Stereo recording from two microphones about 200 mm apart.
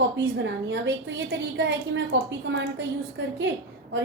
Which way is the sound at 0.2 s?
65° right (ahead or behind).